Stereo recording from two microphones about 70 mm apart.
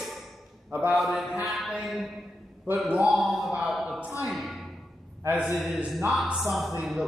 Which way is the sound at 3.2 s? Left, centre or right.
Centre.